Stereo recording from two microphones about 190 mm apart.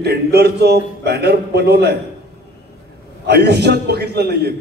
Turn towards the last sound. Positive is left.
turn(degrees=-60)  # may be behind; listen again after turning